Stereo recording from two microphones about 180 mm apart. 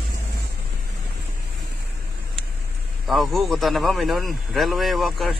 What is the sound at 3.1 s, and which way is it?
Speech, centre (ahead or behind).